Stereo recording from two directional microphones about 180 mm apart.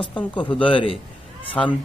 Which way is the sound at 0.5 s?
30° left (ahead or behind).